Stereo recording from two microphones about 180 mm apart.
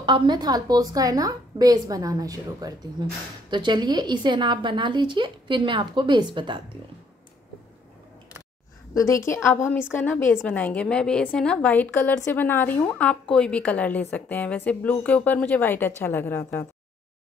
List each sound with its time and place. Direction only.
0.0 s a woman's voice: 25° right (ahead or behind)
8.9 s a woman's voice: 15° left (ahead or behind)